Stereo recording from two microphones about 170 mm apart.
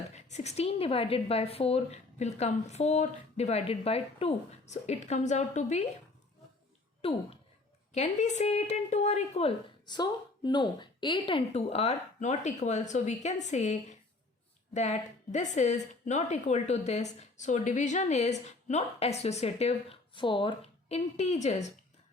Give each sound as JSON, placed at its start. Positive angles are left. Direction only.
{"t": 0.1, "sound": "a woman's voice", "side_deg": 40}
{"t": 7.0, "sound": "a woman's voice", "side_deg": 35}
{"t": 9.6, "sound": "a woman's voice", "side_deg": 25}